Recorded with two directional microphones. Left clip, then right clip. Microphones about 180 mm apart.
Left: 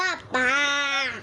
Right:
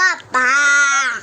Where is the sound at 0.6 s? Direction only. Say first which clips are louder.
Right 10 dB; 25° right (ahead or behind).